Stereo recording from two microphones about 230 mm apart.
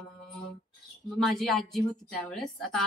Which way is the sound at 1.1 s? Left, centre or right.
Centre.